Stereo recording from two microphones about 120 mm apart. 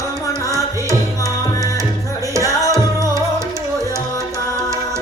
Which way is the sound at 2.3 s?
25° right (ahead or behind).